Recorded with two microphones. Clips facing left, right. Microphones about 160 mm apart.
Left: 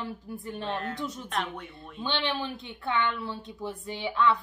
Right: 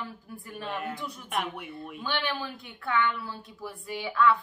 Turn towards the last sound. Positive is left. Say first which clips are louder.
# right 1 dB
turn(degrees=20)  # may be behind; listen again after turning